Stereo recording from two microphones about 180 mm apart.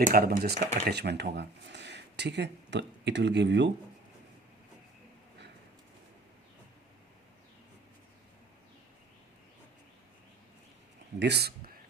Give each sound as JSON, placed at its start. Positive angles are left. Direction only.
{"t": 0.0, "sound": "speech", "side_deg": -55}
{"t": 0.6, "sound": "speech", "side_deg": -40}
{"t": 0.9, "sound": "speech", "side_deg": -65}
{"t": 11.2, "sound": "speech", "side_deg": -65}